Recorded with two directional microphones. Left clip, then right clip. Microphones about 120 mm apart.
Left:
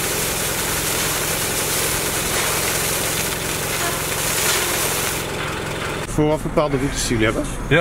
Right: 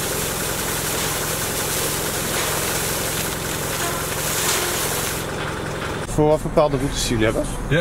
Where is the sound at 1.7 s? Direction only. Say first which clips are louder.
Left 2 dB; centre (ahead or behind).